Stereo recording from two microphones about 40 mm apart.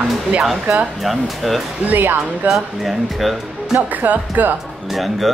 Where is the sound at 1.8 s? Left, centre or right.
Right.